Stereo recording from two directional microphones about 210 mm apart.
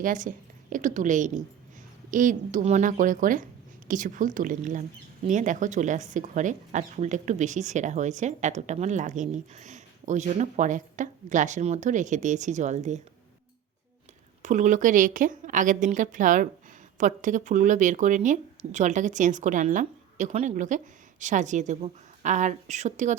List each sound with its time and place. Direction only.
0.0 s speech: 40° right (ahead or behind)
14.4 s speech: 35° right (ahead or behind)